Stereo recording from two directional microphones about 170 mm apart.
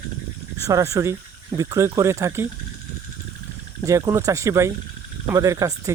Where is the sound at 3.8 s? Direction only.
20° right (ahead or behind).